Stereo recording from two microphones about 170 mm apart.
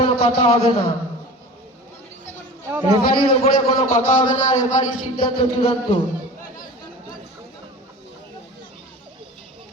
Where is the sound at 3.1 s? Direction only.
30° left (ahead or behind).